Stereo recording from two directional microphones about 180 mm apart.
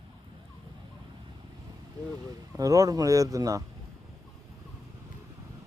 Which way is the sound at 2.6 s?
20° right (ahead or behind).